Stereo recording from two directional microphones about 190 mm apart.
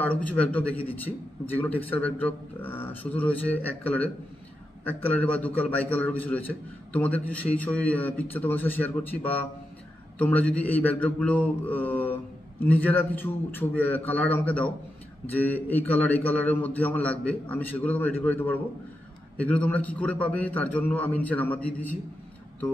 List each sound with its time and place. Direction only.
0.0 s a man's voice: 10° left (ahead or behind)